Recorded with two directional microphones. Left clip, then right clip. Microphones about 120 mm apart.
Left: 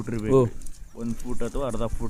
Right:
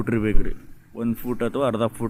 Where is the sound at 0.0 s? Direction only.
25° right (ahead or behind).